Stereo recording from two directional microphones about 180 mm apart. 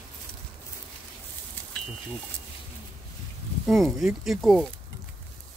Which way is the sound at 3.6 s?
Centre (ahead or behind).